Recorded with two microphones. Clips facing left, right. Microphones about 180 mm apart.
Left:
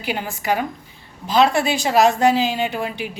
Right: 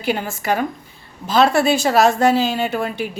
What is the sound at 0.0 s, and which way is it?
A woman's voice, 15° left (ahead or behind).